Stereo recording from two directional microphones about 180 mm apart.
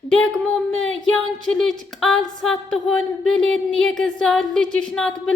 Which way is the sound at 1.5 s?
Centre (ahead or behind).